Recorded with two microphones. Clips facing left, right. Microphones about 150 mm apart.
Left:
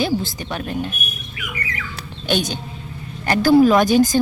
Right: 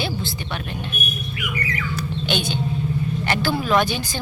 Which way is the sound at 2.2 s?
40° left (ahead or behind).